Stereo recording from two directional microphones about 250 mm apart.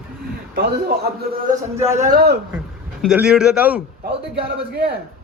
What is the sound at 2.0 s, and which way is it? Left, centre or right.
Speech, right.